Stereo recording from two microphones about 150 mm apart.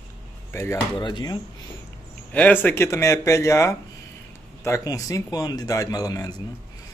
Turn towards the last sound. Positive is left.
turn(degrees=25)  # may be behind; listen again after turning